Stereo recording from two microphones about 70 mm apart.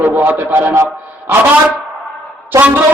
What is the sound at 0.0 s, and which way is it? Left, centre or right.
Speech, right.